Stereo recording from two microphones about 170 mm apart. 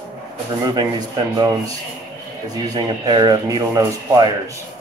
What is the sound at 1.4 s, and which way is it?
Speech, 20° right (ahead or behind).